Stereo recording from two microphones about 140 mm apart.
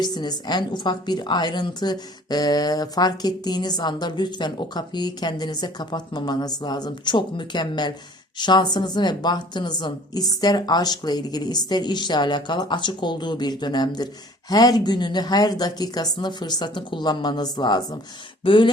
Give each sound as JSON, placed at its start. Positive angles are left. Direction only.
{"t": 0.0, "sound": "a woman's voice", "side_deg": 30}